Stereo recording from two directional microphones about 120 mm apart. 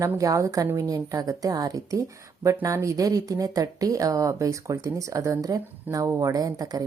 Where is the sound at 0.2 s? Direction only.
25° right (ahead or behind).